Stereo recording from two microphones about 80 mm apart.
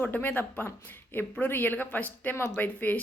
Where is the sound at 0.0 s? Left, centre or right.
Left.